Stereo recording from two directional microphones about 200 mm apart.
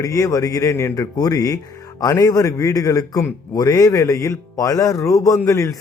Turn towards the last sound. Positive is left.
turn(degrees=15)  # may be behind; listen again after turning